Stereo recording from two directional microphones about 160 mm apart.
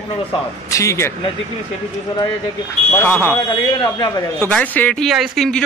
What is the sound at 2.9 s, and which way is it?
Speech, 10° left (ahead or behind).